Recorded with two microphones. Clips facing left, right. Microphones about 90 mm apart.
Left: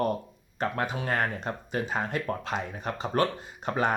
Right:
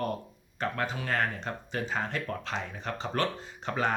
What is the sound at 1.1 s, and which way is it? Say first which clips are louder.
Speech: left 2 dB; 15° left (ahead or behind).